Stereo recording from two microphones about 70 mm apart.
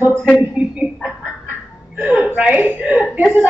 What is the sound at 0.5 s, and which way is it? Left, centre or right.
Speech, centre.